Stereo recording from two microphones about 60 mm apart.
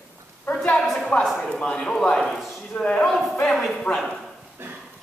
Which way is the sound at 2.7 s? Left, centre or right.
Left.